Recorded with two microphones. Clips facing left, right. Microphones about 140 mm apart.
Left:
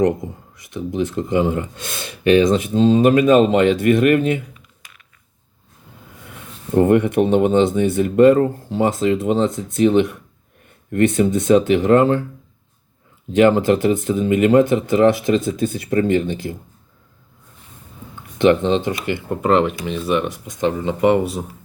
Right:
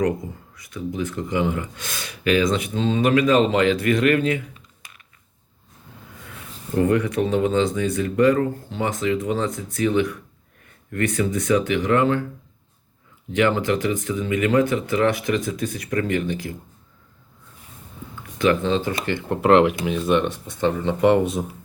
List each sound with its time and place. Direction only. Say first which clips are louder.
0.5 s speech: left 5 dB; 25° left (ahead or behind)
6.7 s speech: left 6 dB; 25° left (ahead or behind)
13.4 s speech: left 6 dB; 30° left (ahead or behind)
18.3 s speech: left 5 dB; 25° left (ahead or behind)
19.0 s speech: left 2 dB; 10° left (ahead or behind)
19.4 s speech: right 2 dB; 5° right (ahead or behind)